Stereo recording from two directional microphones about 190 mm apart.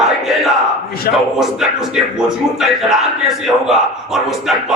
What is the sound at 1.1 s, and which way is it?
Speech, 55° left (ahead or behind).